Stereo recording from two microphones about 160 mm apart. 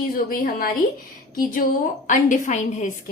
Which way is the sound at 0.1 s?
65° left (ahead or behind).